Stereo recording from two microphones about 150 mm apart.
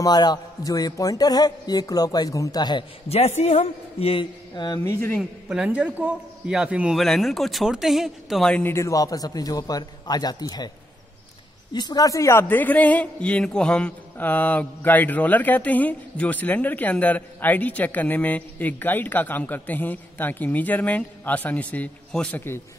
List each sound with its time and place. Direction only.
0.0 s a man's voice: 25° left (ahead or behind)
3.1 s a man's voice: 45° left (ahead or behind)
4.7 s a man's voice: 15° left (ahead or behind)
5.1 s a man's voice: 5° right (ahead or behind); by 10.7 s 25° left (ahead or behind)
11.7 s a man's voice: 30° left (ahead or behind)